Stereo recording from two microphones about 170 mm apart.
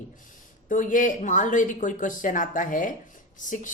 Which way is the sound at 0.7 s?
50° left (ahead or behind).